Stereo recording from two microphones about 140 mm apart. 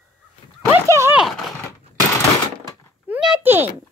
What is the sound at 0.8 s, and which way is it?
Speech, 20° right (ahead or behind).